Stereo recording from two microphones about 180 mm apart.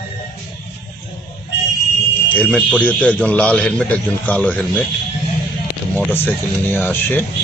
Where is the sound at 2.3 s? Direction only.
5° left (ahead or behind).